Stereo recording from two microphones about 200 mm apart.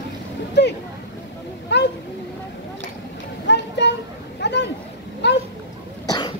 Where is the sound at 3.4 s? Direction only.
60° left (ahead or behind).